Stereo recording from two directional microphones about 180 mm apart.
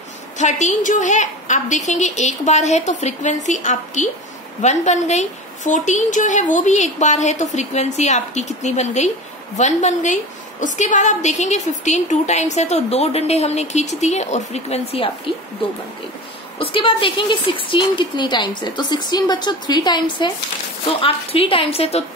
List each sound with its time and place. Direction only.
0.4 s a woman's voice: 40° left (ahead or behind)
16.5 s a woman's voice: 30° left (ahead or behind)